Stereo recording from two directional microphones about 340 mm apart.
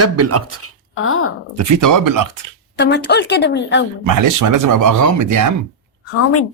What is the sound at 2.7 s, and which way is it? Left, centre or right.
A woman's voice, left.